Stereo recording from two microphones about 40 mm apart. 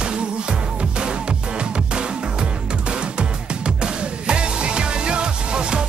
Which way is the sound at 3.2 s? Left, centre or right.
Right.